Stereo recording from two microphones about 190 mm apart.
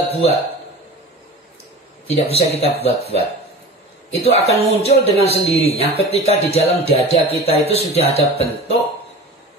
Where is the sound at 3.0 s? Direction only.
30° right (ahead or behind).